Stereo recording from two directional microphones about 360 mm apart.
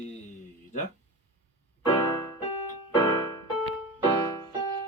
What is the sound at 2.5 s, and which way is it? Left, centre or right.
Keyboard, left.